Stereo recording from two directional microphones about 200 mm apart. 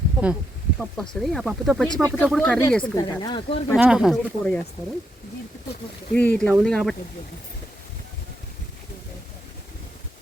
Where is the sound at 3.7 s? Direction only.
5° right (ahead or behind).